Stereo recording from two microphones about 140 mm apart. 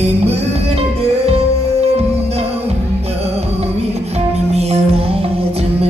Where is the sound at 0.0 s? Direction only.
50° right (ahead or behind).